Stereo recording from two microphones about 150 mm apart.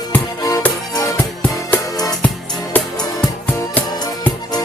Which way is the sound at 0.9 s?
25° left (ahead or behind).